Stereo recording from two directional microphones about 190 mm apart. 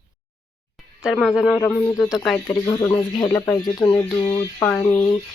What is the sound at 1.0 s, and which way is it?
Speech, centre (ahead or behind).